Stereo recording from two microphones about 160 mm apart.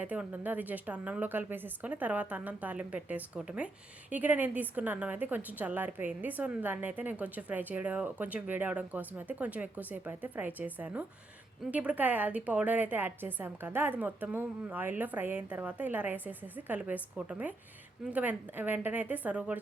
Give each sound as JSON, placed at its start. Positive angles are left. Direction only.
{"t": 0.0, "sound": "a woman's voice", "side_deg": -10}